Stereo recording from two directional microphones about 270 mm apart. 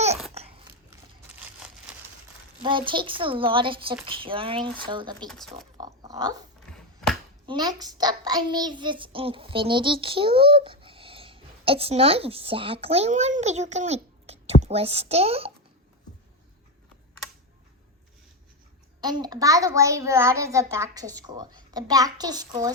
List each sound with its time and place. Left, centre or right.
0.4 s babbling: right
2.6 s speech: centre
5.3 s speech: centre
5.7 s a sound: centre
6.6 s a sound: centre
7.4 s a child's voice: centre
19.0 s a child's voice: centre